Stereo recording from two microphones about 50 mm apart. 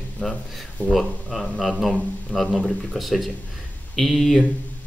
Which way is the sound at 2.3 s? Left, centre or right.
Centre.